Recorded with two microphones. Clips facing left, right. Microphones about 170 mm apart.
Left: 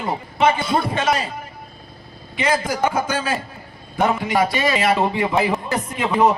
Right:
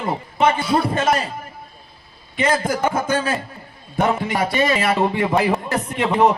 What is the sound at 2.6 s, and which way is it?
Speech, 50° right (ahead or behind).